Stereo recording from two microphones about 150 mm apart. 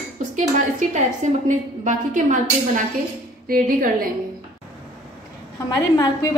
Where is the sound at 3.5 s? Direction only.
75° right (ahead or behind).